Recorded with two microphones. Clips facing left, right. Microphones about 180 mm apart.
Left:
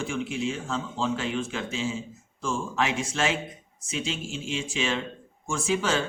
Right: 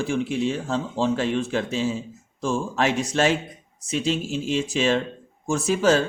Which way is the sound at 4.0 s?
40° right (ahead or behind).